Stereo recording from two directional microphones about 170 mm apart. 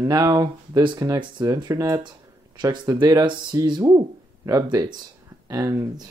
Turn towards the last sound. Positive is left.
turn(degrees=-20)  # may be behind; listen again after turning